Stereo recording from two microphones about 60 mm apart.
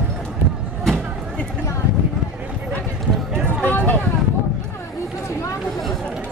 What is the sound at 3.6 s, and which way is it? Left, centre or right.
Vehicle, left.